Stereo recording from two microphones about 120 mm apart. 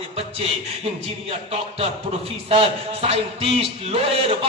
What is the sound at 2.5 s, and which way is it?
Speech, 55° right (ahead or behind).